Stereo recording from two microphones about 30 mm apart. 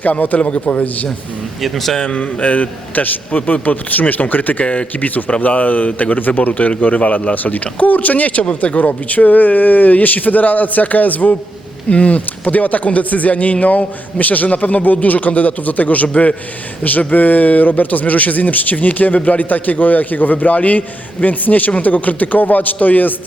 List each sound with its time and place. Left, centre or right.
0.0 s speech: left
0.3 s speech: left
0.6 s speech: left
1.6 s speech: centre
2.1 s speech: left
4.6 s speech: left
4.9 s speech: left
6.6 s speech: left
7.6 s speech: left
8.8 s speech: left
11.9 s speech: left